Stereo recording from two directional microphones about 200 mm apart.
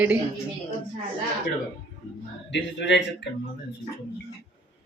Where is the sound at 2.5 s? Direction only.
60° left (ahead or behind).